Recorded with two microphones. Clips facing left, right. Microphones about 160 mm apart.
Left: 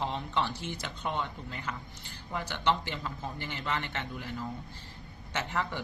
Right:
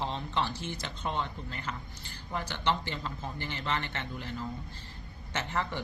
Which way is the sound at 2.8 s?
15° left (ahead or behind).